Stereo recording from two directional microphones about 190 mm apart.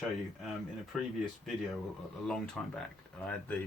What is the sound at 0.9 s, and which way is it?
Speech, centre (ahead or behind).